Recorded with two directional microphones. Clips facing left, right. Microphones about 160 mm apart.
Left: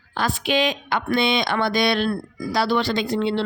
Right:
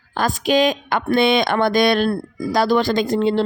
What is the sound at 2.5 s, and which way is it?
Speech, 45° right (ahead or behind).